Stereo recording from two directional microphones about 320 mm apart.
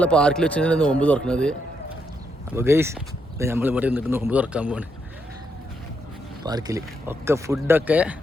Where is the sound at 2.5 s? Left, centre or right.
Centre.